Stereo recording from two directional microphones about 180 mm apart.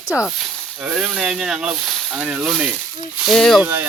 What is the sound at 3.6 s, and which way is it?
Speech, 10° right (ahead or behind).